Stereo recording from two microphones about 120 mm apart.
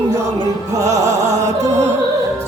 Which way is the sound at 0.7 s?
25° right (ahead or behind).